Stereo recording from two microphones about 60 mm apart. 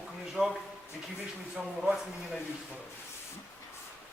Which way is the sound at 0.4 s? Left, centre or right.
Centre.